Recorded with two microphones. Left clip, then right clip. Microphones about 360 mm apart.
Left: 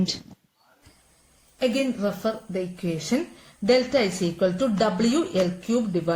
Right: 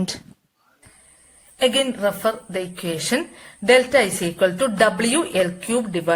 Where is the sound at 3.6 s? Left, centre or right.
Right.